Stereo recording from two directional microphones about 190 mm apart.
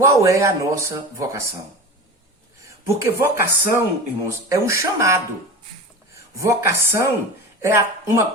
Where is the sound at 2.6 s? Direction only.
15° right (ahead or behind).